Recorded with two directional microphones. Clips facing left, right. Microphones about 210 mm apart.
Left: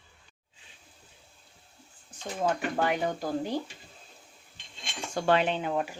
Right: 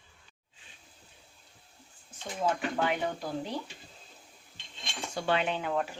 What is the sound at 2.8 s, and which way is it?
Speech, 45° left (ahead or behind).